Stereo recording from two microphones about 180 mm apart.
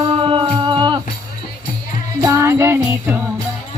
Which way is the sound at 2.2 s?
15° right (ahead or behind).